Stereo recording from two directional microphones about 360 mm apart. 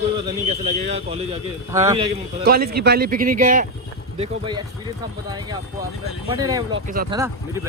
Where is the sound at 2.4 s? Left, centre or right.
Right; by 6.8 s centre.